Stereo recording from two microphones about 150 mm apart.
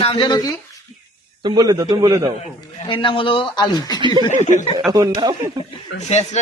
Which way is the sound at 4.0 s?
30° right (ahead or behind).